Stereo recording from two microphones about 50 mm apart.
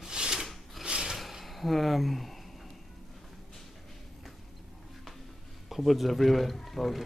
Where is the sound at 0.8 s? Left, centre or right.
Centre.